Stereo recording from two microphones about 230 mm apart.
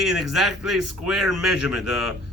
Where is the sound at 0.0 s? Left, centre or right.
Centre.